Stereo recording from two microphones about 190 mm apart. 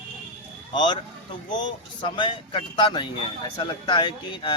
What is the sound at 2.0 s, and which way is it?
Speech, 25° left (ahead or behind).